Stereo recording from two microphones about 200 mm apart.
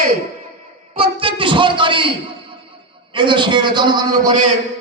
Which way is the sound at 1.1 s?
25° right (ahead or behind).